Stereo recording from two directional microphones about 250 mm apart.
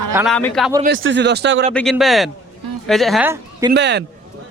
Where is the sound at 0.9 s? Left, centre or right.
Right.